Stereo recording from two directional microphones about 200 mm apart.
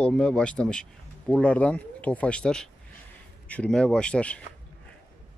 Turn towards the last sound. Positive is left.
turn(degrees=5)  # may be behind; listen again after turning